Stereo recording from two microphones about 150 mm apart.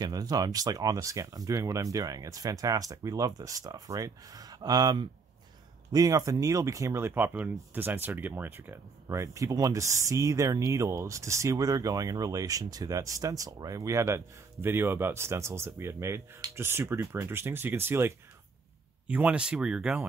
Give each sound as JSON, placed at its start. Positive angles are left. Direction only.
{"t": 0.0, "sound": "speech", "side_deg": -25}